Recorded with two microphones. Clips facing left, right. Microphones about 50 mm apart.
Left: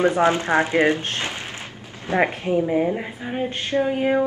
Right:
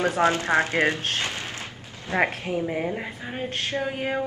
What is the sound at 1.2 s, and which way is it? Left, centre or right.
Artillery fire, left.